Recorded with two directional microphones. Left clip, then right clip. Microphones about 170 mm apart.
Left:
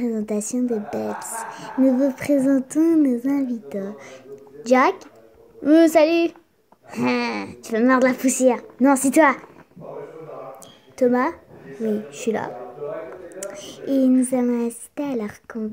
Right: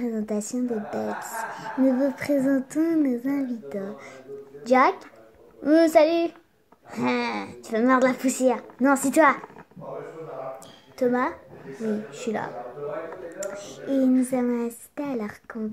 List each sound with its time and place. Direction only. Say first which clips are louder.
0.0 s a woman's voice: left 4 dB; 25° left (ahead or behind)
11.0 s a woman's voice: left 4 dB; 30° left (ahead or behind)
13.8 s a sound: left 4 dB; centre (ahead or behind)
14.3 s a woman's voice: left 4 dB; 25° left (ahead or behind)